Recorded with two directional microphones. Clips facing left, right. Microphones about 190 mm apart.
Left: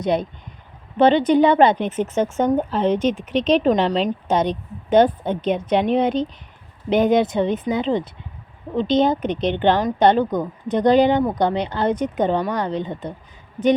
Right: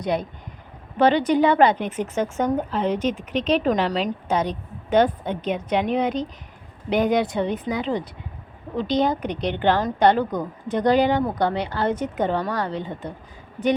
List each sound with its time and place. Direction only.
0.0 s a woman's voice: 20° left (ahead or behind)